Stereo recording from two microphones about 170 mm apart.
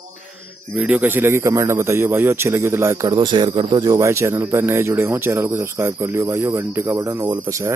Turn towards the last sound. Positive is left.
turn(degrees=-20)  # may be behind; listen again after turning